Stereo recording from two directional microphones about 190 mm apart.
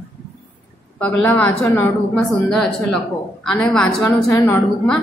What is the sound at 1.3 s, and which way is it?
A woman's voice, 10° left (ahead or behind).